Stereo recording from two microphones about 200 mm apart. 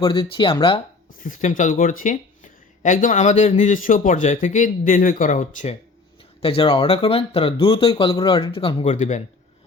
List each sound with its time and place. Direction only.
0.0 s speech: 25° left (ahead or behind)
1.2 s speech: 40° left (ahead or behind)
6.4 s speech: 30° left (ahead or behind)